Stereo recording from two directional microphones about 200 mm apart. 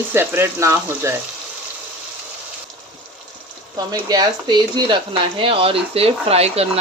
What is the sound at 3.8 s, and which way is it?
Speech, 20° right (ahead or behind).